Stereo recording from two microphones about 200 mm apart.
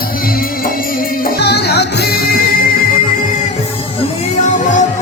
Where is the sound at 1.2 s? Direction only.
55° left (ahead or behind).